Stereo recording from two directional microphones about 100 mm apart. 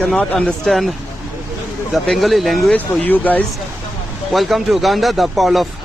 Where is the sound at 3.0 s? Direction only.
15° left (ahead or behind).